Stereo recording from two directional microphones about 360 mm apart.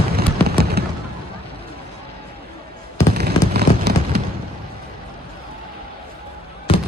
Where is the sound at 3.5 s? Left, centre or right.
Right.